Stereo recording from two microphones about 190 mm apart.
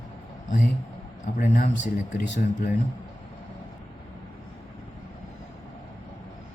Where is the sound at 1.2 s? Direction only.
45° left (ahead or behind).